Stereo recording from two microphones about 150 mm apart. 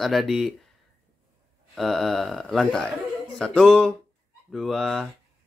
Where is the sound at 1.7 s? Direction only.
Centre (ahead or behind).